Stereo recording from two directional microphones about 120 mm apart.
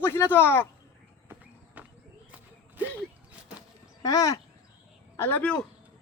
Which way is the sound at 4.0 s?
30° left (ahead or behind).